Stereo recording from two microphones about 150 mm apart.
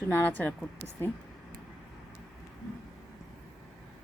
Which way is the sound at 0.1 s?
15° left (ahead or behind).